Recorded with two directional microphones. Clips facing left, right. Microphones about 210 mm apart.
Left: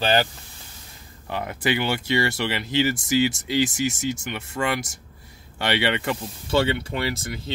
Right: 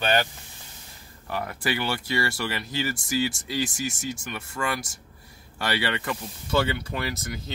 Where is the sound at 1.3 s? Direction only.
20° left (ahead or behind).